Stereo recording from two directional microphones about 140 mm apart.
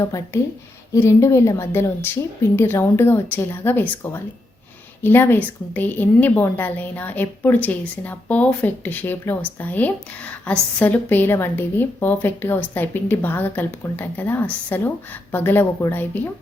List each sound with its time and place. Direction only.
0.3 s a woman's voice: 15° left (ahead or behind)